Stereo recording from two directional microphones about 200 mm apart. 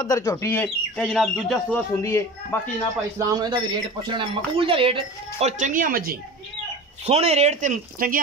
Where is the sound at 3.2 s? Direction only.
20° right (ahead or behind).